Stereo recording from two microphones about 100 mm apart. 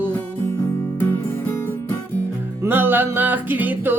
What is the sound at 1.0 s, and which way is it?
Music, 20° left (ahead or behind).